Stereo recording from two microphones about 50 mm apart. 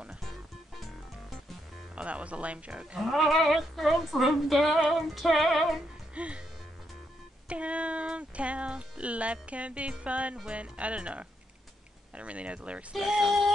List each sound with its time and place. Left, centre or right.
0.2 s music: centre
2.0 s speech: right
3.0 s speech: centre
6.1 s speech: right
7.4 s speech: right
12.9 s speech: centre